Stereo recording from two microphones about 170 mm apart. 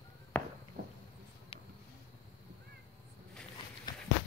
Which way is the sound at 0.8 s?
55° right (ahead or behind).